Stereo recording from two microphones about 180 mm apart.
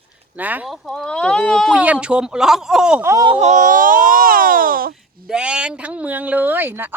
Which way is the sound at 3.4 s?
40° right (ahead or behind).